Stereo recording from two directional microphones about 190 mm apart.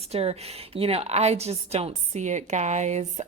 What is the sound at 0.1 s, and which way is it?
A woman's voice, 35° right (ahead or behind).